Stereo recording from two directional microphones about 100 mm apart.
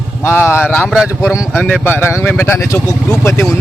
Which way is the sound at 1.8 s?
20° left (ahead or behind).